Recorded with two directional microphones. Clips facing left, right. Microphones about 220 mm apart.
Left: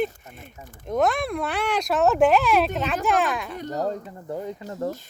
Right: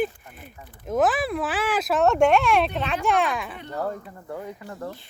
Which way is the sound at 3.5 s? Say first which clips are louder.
Left 4 dB; 40° left (ahead or behind).